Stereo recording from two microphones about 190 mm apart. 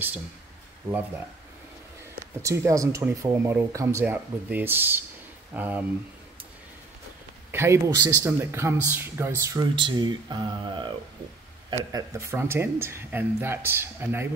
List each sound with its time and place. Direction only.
2.1 s speech: 15° right (ahead or behind)
7.5 s speech: 15° right (ahead or behind)